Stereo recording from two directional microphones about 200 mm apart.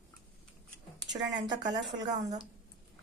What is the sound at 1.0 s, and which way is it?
A woman's voice, 20° right (ahead or behind).